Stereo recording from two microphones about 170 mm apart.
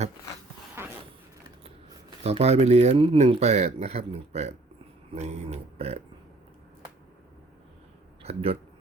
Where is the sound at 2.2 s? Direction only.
40° right (ahead or behind).